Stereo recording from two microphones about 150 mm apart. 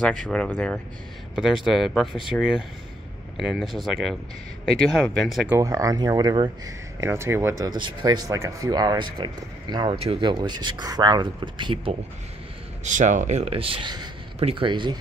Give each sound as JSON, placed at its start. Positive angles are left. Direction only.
{"t": 0.0, "sound": "speech", "side_deg": 5}
{"t": 2.3, "sound": "speech", "side_deg": 10}
{"t": 5.6, "sound": "speech", "side_deg": -20}
{"t": 7.0, "sound": "speech", "side_deg": -20}
{"t": 12.8, "sound": "speech", "side_deg": -55}